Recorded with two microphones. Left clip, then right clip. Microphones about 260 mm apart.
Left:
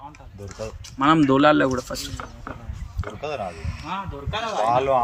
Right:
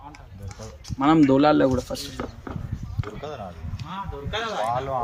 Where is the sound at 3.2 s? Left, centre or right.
Left.